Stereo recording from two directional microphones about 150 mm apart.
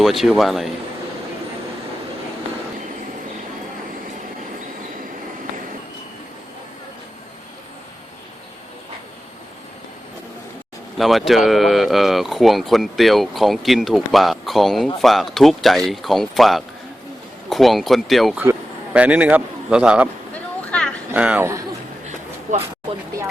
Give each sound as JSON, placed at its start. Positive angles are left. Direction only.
{"t": 0.0, "sound": "speech", "side_deg": 0}
{"t": 10.9, "sound": "a man's voice", "side_deg": 0}
{"t": 20.3, "sound": "a sound", "side_deg": 5}
{"t": 21.1, "sound": "a man's voice", "side_deg": -10}
{"t": 22.5, "sound": "speech", "side_deg": -55}